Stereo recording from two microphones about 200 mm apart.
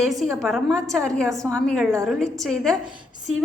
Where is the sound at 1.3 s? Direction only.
15° right (ahead or behind).